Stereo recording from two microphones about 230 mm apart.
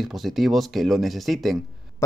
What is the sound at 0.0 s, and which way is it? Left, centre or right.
Speech, centre.